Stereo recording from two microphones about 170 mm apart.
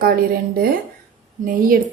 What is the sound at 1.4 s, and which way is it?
Speech, 55° right (ahead or behind).